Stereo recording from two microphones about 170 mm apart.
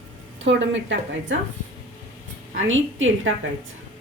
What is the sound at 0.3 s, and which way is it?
A woman's voice, 90° right.